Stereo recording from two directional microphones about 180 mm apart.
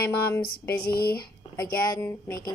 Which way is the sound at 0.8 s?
55° left (ahead or behind).